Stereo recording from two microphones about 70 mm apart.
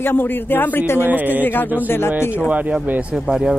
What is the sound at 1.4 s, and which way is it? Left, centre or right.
Speech, left.